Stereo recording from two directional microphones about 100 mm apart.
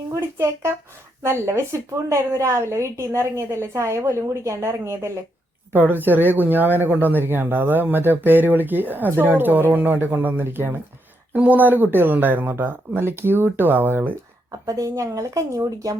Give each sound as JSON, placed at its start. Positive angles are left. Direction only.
{"t": 0.1, "sound": "speech", "side_deg": -25}
{"t": 14.5, "sound": "speech", "side_deg": -35}